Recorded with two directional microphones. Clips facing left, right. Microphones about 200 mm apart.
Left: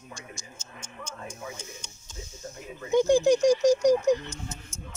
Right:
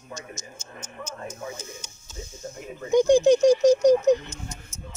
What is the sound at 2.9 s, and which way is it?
Speech, 15° right (ahead or behind).